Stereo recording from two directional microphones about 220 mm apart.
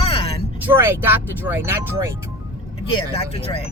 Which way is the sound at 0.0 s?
25° left (ahead or behind).